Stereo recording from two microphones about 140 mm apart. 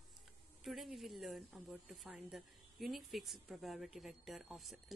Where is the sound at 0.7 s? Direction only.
Centre (ahead or behind).